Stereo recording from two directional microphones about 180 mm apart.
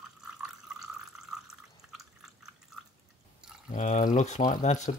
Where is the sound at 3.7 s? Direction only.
45° left (ahead or behind).